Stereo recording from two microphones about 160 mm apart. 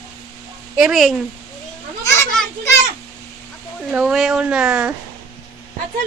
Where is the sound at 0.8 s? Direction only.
Centre (ahead or behind).